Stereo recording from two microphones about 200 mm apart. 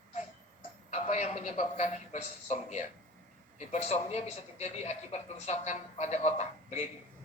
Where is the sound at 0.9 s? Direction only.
35° left (ahead or behind).